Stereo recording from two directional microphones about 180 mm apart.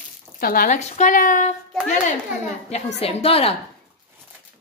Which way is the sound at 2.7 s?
35° left (ahead or behind).